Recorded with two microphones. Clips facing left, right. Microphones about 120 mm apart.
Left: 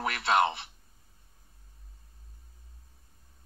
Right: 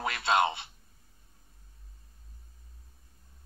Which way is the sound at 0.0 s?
25° right (ahead or behind).